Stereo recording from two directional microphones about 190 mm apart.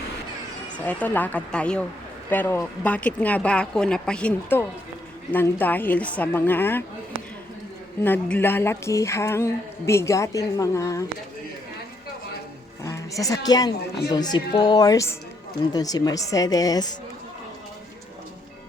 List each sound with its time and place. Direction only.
0.9 s speech: 10° left (ahead or behind)
8.0 s speech: 10° left (ahead or behind)
12.8 s a woman's voice: 15° left (ahead or behind)